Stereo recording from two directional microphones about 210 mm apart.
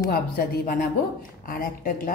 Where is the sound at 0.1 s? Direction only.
40° left (ahead or behind).